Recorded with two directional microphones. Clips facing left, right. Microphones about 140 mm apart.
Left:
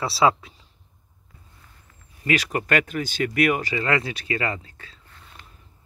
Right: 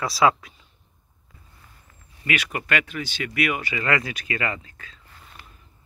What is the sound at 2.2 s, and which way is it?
Speech, 35° left (ahead or behind).